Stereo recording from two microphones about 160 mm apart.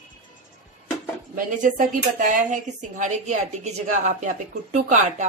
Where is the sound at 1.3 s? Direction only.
55° right (ahead or behind).